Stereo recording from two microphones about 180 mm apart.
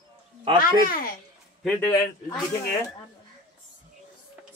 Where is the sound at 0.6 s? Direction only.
50° left (ahead or behind).